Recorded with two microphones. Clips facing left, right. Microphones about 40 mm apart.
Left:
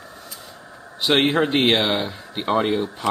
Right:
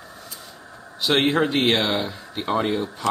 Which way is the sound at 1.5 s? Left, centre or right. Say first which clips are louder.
Left 2 dB; centre.